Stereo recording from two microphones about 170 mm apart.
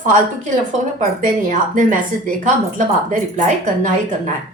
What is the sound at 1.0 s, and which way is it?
A woman's voice, 55° right (ahead or behind).